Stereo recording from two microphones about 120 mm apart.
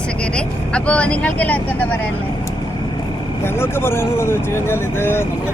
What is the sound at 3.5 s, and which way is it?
Speech, 20° left (ahead or behind).